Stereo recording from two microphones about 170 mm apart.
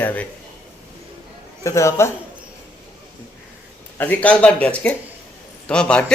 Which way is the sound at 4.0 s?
10° left (ahead or behind).